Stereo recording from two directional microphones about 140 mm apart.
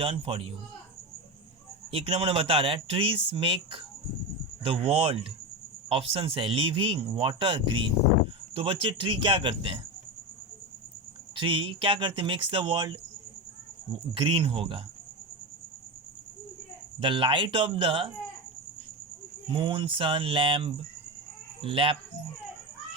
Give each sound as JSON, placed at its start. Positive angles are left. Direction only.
{"t": 0.0, "sound": "speech", "side_deg": -40}
{"t": 1.9, "sound": "speech", "side_deg": -40}
{"t": 11.3, "sound": "speech", "side_deg": -35}
{"t": 14.1, "sound": "speech", "side_deg": -40}
{"t": 17.0, "sound": "speech", "side_deg": -40}
{"t": 19.5, "sound": "speech", "side_deg": -35}